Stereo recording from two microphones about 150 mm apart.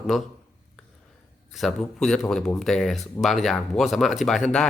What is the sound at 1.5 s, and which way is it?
Speech, centre (ahead or behind).